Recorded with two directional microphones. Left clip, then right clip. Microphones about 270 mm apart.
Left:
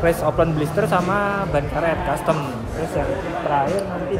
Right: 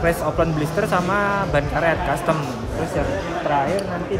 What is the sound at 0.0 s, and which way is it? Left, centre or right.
Speech, centre.